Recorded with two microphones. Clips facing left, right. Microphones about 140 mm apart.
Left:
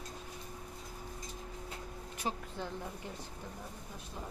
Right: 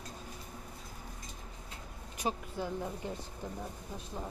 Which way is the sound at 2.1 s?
15° right (ahead or behind).